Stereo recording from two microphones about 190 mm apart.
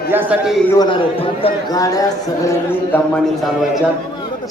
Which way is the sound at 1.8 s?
15° left (ahead or behind).